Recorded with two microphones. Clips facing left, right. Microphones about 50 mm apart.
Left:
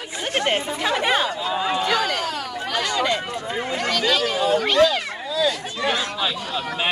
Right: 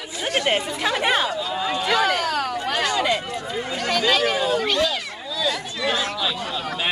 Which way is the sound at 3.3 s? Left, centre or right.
Left.